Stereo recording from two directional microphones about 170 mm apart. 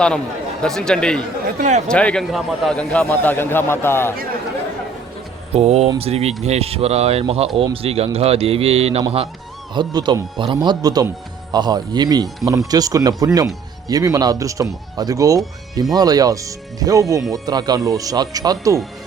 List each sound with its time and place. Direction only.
0.6 s a man's voice: 5° left (ahead or behind)
1.5 s speech: 45° right (ahead or behind)
1.9 s a man's voice: 5° left (ahead or behind)
5.5 s speech: 40° right (ahead or behind)
9.7 s speech: 25° right (ahead or behind)